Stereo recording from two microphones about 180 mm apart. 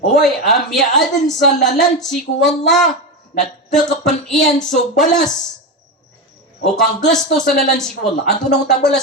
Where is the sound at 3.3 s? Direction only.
60° left (ahead or behind).